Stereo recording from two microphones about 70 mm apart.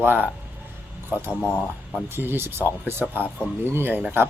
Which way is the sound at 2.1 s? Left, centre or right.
Right.